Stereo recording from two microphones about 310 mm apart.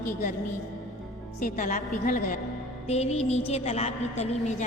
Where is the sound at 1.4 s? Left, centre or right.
Left.